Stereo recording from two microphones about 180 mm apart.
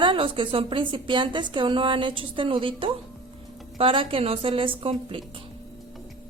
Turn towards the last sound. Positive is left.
turn(degrees=-30)  # may be behind; listen again after turning